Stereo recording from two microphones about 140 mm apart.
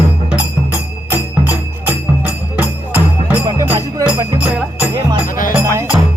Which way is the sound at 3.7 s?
25° right (ahead or behind).